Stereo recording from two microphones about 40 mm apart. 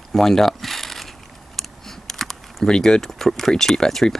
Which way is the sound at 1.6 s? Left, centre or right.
Centre.